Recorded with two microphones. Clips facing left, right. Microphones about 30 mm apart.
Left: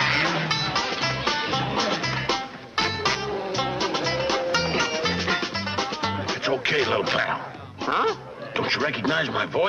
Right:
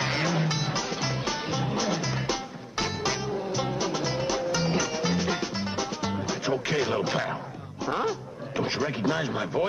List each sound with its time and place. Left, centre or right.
0.0 s music: left
7.8 s speech: left